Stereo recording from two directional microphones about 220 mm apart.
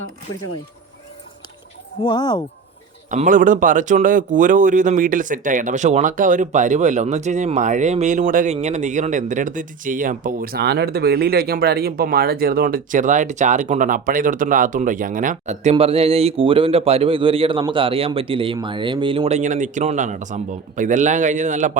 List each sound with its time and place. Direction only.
2.0 s speech: 20° left (ahead or behind)
3.1 s a man's voice: 35° right (ahead or behind)